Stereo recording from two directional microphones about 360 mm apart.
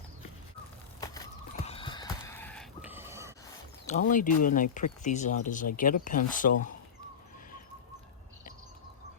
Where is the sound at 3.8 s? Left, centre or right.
Left.